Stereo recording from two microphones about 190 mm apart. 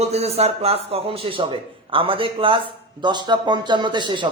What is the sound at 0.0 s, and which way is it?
A man's voice, 35° right (ahead or behind).